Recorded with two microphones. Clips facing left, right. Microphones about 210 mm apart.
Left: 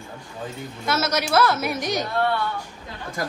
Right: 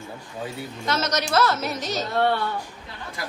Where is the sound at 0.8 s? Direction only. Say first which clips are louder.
Left 2 dB; 10° left (ahead or behind).